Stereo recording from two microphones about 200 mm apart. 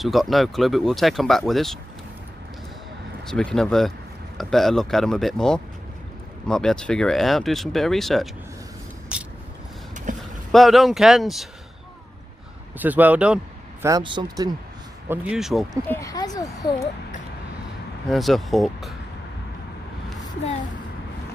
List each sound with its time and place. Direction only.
0.0 s speech: centre (ahead or behind)
3.3 s speech: 5° left (ahead or behind)
9.1 s vehicle: 5° right (ahead or behind)
10.1 s vehicle: 40° right (ahead or behind)
10.5 s speech: centre (ahead or behind)
12.7 s speech: 10° right (ahead or behind)
13.8 s speech: 20° right (ahead or behind)
15.0 s speech: 5° right (ahead or behind)
15.9 s speech: 15° left (ahead or behind)
18.0 s speech: centre (ahead or behind)